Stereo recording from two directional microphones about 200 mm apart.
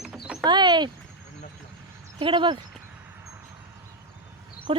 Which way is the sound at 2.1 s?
25° right (ahead or behind).